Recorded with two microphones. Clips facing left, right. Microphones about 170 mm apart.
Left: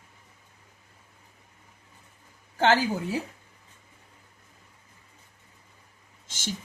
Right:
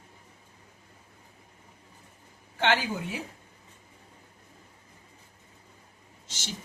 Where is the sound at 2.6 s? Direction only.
40° left (ahead or behind).